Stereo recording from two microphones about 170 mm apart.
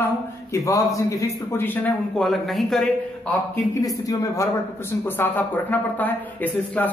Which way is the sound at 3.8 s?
20° left (ahead or behind).